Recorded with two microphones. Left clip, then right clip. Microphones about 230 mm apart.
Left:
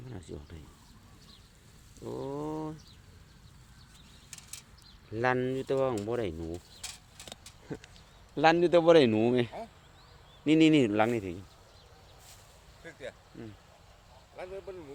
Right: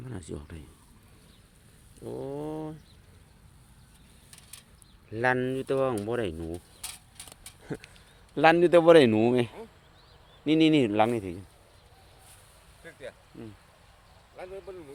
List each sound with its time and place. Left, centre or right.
0.0 s speech: right
2.0 s a sound: centre
5.1 s speech: centre
8.4 s speech: right
12.8 s vehicle: centre
14.3 s speech: centre